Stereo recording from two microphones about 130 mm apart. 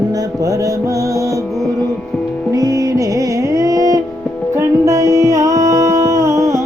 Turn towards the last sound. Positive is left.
turn(degrees=-25)  # may be behind; listen again after turning